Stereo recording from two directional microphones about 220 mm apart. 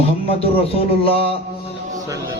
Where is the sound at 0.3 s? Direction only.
25° left (ahead or behind).